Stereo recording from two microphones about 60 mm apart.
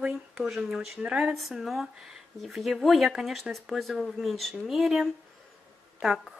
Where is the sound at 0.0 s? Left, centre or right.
Centre.